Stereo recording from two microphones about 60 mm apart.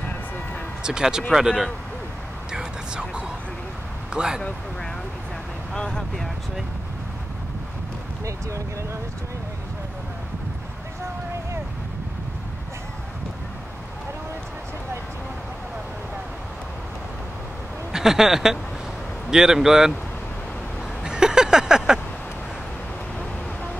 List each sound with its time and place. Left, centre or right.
0.8 s speech: centre
2.5 s music: centre
4.1 s speech: centre
5.8 s speech: centre
8.3 s speech: right
17.9 s speech: centre
21.0 s a sound: centre